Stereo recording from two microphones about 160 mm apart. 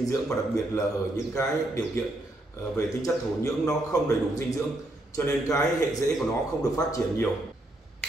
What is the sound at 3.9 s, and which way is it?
A man's voice, 20° left (ahead or behind).